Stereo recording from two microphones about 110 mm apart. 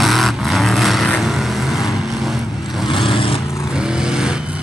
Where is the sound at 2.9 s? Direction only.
50° left (ahead or behind).